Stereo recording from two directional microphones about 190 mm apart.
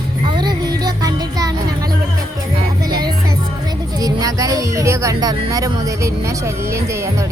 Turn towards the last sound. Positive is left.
turn(degrees=-15)  # may be behind; listen again after turning